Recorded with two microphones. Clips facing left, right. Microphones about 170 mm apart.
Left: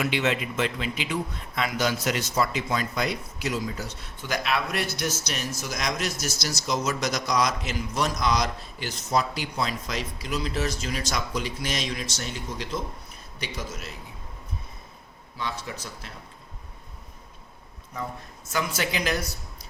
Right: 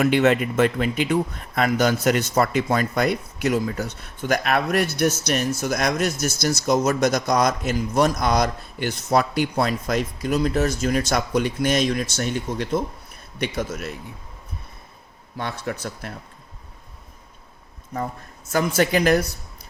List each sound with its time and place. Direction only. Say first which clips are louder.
0.0 s speech: right 8 dB; 50° right (ahead or behind)
15.4 s speech: right 5 dB; 55° right (ahead or behind)
18.5 s speech: right 8 dB; 50° right (ahead or behind)